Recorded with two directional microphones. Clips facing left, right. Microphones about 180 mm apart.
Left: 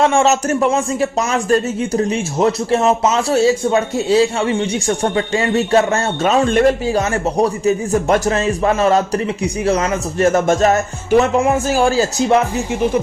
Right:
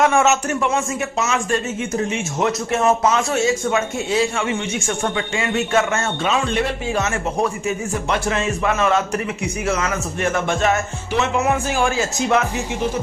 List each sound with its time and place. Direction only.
0.0 s speech: 30° left (ahead or behind)